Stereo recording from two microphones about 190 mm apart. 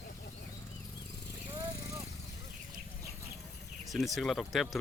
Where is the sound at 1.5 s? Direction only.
20° right (ahead or behind).